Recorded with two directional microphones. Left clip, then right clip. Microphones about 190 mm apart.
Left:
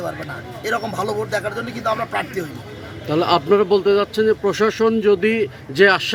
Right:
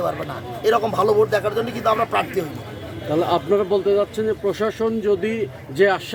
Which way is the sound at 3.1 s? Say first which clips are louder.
Left 3 dB; 40° left (ahead or behind).